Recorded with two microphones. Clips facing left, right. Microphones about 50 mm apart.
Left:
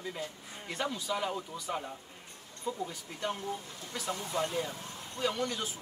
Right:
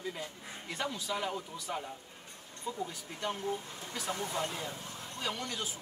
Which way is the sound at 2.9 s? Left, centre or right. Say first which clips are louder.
Left 1 dB; centre.